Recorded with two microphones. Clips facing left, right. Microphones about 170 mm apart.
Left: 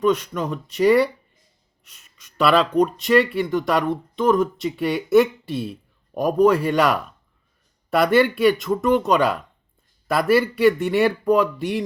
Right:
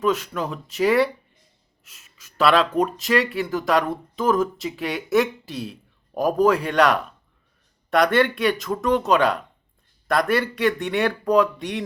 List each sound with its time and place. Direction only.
0.0 s speech: centre (ahead or behind)